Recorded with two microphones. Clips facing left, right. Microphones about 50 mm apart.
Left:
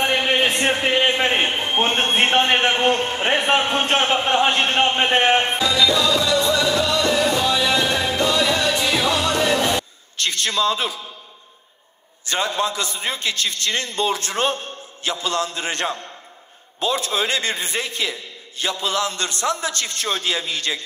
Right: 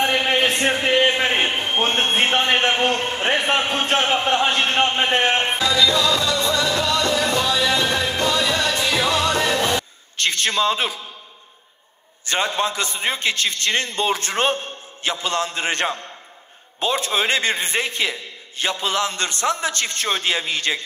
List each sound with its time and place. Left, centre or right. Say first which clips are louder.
0.0 s a sound: even; centre
2.9 s a man's voice: left 1 dB; centre
4.4 s a sound: left 1 dB; centre
5.6 s music: even; centre
8.3 s music: left 1 dB; centre
10.1 s a man's voice: right 1 dB; right
12.3 s a man's voice: even; right